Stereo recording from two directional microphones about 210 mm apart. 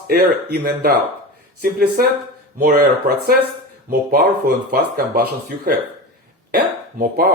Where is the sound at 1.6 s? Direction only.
40° right (ahead or behind).